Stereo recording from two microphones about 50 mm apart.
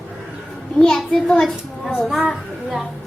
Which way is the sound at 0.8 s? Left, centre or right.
Centre.